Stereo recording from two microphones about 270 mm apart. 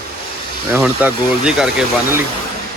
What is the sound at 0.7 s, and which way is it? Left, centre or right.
Speech, centre.